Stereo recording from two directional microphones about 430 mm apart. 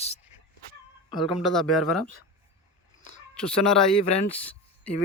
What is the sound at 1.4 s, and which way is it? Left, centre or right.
Speech, centre.